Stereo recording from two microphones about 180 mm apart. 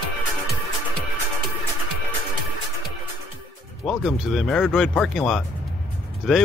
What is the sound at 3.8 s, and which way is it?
Speech, centre (ahead or behind).